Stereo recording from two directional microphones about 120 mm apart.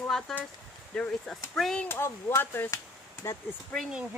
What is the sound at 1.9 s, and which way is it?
Speech, 20° left (ahead or behind).